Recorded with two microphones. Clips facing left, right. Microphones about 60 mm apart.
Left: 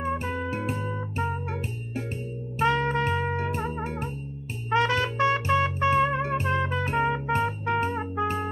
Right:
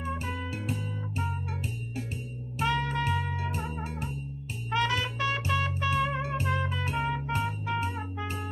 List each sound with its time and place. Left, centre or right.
0.0 s music: left
2.6 s music: left